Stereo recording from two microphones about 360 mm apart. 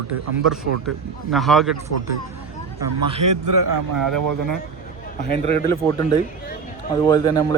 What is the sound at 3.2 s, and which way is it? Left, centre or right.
A man's voice, right.